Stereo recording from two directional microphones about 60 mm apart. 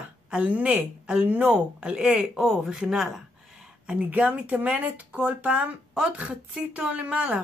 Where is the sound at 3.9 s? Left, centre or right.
Right.